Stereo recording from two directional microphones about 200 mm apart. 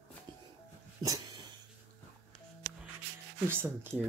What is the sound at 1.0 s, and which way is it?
Dog, 20° right (ahead or behind).